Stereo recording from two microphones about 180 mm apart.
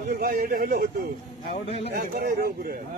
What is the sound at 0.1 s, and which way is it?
Speech, 55° right (ahead or behind).